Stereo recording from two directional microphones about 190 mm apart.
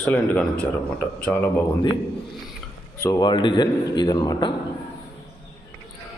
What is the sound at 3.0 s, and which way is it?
Speech, 20° left (ahead or behind).